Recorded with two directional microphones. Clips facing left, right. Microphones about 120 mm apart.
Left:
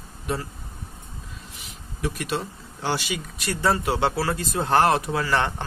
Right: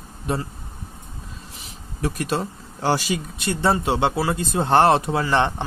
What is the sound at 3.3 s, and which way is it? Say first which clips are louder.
Speech: right 1 dB; 25° right (ahead or behind).